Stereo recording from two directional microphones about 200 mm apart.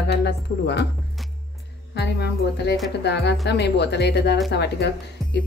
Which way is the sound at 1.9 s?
60° left (ahead or behind).